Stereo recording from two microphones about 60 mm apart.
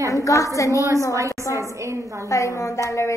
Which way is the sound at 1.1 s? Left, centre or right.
Right.